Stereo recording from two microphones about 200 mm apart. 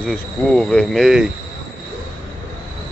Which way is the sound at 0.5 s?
5° left (ahead or behind).